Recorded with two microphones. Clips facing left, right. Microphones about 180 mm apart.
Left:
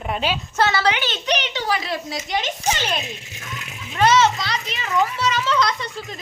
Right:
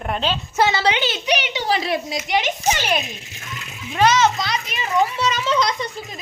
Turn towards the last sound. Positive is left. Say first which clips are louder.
# right 1 dB
turn(degrees=-15)  # may be behind; listen again after turning